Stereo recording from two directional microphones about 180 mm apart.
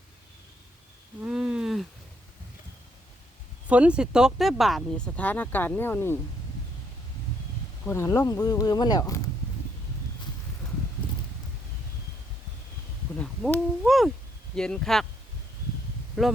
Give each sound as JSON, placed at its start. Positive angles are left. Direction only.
{"t": 1.2, "sound": "a sound", "side_deg": -5}
{"t": 3.7, "sound": "speech", "side_deg": -5}
{"t": 7.9, "sound": "speech", "side_deg": 15}
{"t": 13.1, "sound": "a sound", "side_deg": 5}
{"t": 14.5, "sound": "speech", "side_deg": 5}
{"t": 16.2, "sound": "speech", "side_deg": 0}